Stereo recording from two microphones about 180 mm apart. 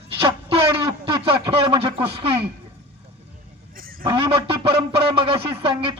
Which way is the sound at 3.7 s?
50° right (ahead or behind).